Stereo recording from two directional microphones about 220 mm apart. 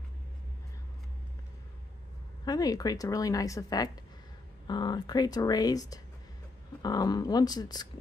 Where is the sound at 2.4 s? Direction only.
15° left (ahead or behind).